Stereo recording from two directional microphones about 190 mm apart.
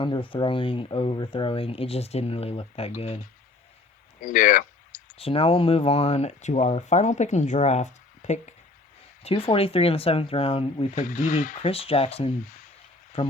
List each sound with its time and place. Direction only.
0.0 s speech: 25° left (ahead or behind)
4.2 s a sound: 45° left (ahead or behind)
5.1 s speech: 30° left (ahead or behind)
11.0 s speech: 45° left (ahead or behind)
11.6 s speech: 30° left (ahead or behind)